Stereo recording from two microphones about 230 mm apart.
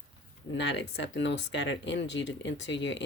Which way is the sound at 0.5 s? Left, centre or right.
Left.